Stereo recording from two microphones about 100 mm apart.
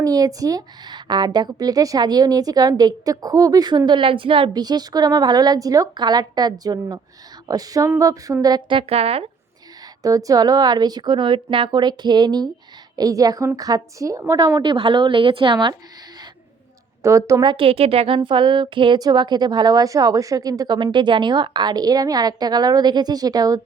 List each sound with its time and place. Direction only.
0.0 s a woman's voice: 35° right (ahead or behind)
8.7 s a woman's voice: 75° right (ahead or behind)
10.0 s a woman's voice: 35° right (ahead or behind); by 15.7 s 55° right (ahead or behind)
17.0 s a woman's voice: 30° right (ahead or behind)
17.4 s a woman's voice: 50° right (ahead or behind)
17.7 s speech: 75° right (ahead or behind); by 18.9 s 55° right (ahead or behind)
18.9 s a woman's voice: 45° right (ahead or behind)
20.7 s a woman's voice: 55° right (ahead or behind); by 23.6 s 40° right (ahead or behind)